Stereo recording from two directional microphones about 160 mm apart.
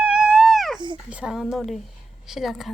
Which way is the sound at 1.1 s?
5° right (ahead or behind).